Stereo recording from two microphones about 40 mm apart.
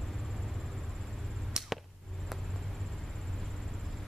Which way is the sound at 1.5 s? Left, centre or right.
Centre.